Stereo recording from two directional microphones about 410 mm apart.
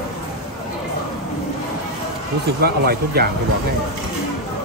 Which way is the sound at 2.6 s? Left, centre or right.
Right.